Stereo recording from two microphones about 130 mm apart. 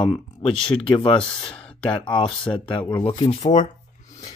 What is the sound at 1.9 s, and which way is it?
Speech, 40° left (ahead or behind).